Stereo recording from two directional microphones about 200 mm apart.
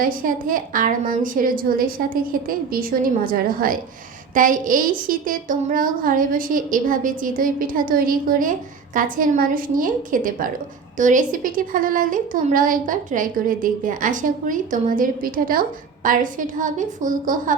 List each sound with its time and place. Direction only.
0.0 s a woman's voice: 45° right (ahead or behind)